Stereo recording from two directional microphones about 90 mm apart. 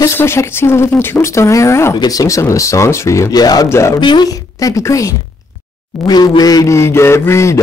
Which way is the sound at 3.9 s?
60° left (ahead or behind).